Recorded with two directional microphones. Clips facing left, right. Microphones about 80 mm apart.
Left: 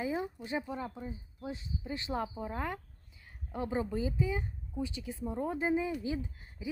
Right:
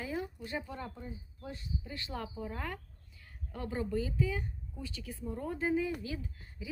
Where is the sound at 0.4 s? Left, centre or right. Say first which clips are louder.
Left 3 dB; centre.